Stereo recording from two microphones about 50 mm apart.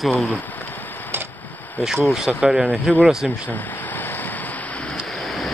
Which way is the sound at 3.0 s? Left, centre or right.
Centre.